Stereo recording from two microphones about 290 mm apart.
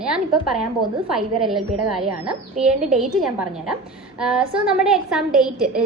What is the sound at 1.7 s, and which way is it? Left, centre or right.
Speech, right.